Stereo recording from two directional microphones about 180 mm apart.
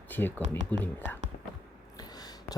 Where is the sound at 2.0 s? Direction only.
20° left (ahead or behind).